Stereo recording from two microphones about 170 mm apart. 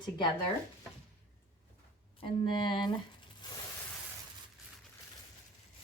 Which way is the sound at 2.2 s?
30° left (ahead or behind).